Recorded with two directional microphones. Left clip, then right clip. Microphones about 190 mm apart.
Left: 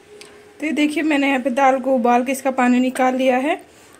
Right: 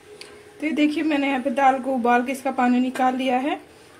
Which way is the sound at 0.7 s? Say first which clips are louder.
Left 3 dB; 30° left (ahead or behind).